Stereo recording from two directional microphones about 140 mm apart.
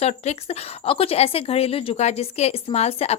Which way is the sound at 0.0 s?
50° left (ahead or behind).